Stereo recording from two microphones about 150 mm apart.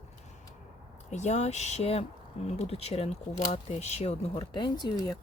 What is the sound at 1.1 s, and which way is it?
Speech, 50° left (ahead or behind).